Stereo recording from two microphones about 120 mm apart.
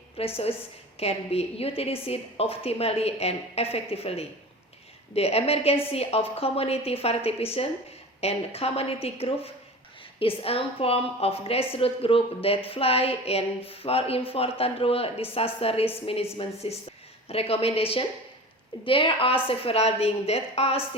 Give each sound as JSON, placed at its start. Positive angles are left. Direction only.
{"t": 0.2, "sound": "a woman's voice", "side_deg": 55}